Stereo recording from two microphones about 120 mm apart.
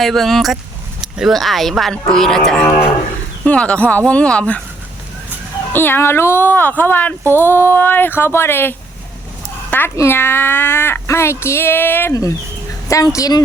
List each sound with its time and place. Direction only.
0.0 s speech: centre (ahead or behind)
5.7 s speech: 20° left (ahead or behind)
12.9 s speech: 25° left (ahead or behind)